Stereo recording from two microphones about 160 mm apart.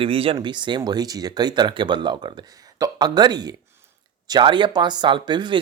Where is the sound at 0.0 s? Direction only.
35° right (ahead or behind).